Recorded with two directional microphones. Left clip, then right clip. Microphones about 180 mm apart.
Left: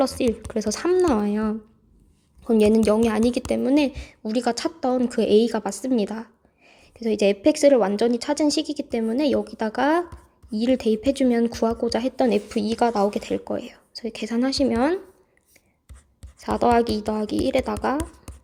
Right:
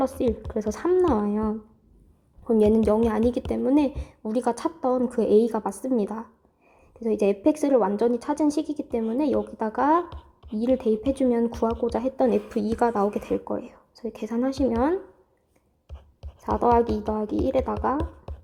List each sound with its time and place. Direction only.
0.0 s speech: 15° left (ahead or behind)
16.4 s a woman's voice: 15° left (ahead or behind)